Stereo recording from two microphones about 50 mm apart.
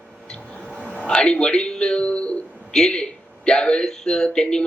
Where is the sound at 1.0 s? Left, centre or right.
Centre.